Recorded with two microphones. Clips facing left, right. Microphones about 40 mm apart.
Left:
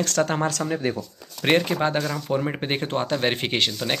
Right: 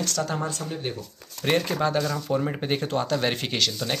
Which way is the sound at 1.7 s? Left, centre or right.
Left.